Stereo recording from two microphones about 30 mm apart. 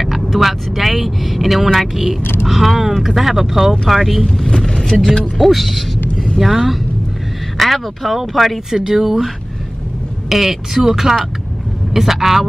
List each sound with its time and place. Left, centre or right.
0.0 s speech: centre
4.2 s speech: centre
4.6 s vehicle: centre
5.4 s speech: centre
8.9 s speech: centre
10.3 s speech: centre